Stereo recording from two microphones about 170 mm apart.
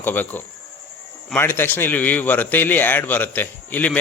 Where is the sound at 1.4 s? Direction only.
10° left (ahead or behind).